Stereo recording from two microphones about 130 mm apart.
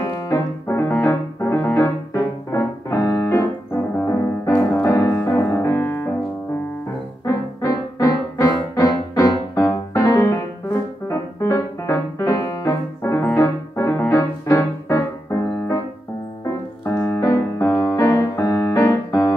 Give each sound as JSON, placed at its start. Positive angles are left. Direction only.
{"t": 0.0, "sound": "music", "side_deg": 20}
{"t": 4.7, "sound": "piano", "side_deg": 15}
{"t": 7.2, "sound": "music", "side_deg": 25}
{"t": 9.9, "sound": "piano", "side_deg": 25}
{"t": 16.4, "sound": "keyboard", "side_deg": 15}
{"t": 17.9, "sound": "music", "side_deg": 25}